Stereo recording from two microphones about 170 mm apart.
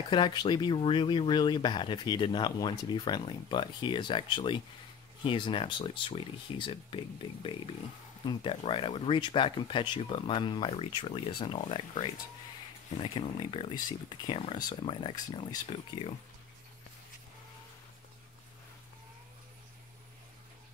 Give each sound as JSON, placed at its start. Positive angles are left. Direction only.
{"t": 0.1, "sound": "speech", "side_deg": 25}